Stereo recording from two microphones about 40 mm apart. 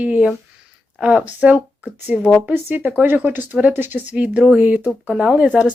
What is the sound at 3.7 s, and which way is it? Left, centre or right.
Speech, right.